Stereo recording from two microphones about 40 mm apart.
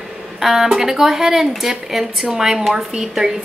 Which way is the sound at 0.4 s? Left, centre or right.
Centre.